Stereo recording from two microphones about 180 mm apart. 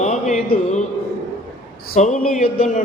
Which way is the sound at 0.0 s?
40° left (ahead or behind).